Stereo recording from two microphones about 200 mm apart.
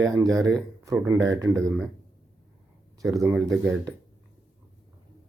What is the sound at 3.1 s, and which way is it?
Speech, 15° right (ahead or behind).